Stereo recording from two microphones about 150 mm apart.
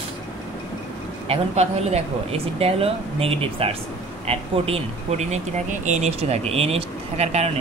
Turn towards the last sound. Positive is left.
turn(degrees=-45)  # may be behind; listen again after turning